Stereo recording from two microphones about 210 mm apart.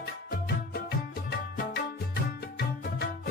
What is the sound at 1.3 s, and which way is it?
Music, 50° left (ahead or behind).